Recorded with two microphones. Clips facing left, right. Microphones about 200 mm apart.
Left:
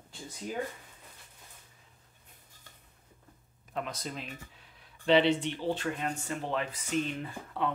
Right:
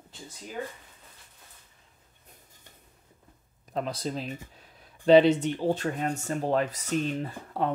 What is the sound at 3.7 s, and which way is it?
Speech, 35° right (ahead or behind).